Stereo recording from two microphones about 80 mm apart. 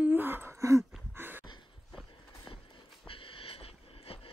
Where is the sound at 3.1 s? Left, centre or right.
Left.